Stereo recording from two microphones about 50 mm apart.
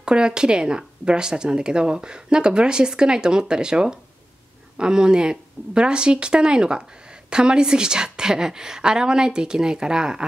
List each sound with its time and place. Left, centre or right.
0.0 s a woman's voice: centre